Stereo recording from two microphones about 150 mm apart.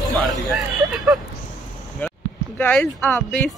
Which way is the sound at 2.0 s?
10° left (ahead or behind).